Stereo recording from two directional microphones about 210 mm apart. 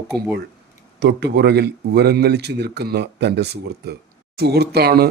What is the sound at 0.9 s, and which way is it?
Speech, 55° right (ahead or behind).